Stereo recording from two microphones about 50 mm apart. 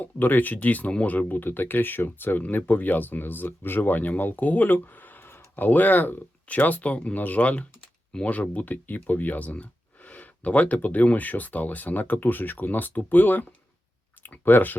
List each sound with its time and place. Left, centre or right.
0.0 s speech: left